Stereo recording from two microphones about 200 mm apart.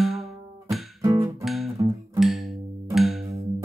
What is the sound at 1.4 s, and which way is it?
Guitar, centre (ahead or behind).